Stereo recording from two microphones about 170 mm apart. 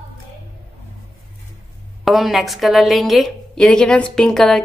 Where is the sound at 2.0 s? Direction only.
Centre (ahead or behind).